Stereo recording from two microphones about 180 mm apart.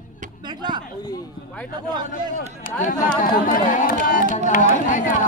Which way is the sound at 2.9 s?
50° left (ahead or behind).